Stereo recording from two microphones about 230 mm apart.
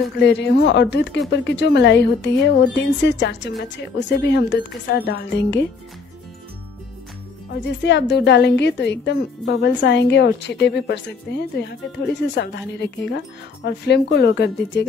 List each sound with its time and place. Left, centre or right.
0.2 s a woman's voice: left
7.6 s a woman's voice: left